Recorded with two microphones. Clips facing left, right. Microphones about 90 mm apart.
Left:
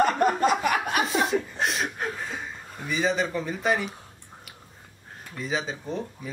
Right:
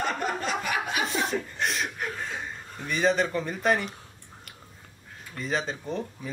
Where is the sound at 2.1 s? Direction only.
Centre (ahead or behind).